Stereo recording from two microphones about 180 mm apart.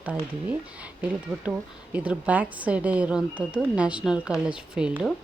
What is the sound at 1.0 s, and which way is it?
A woman's voice, 10° right (ahead or behind).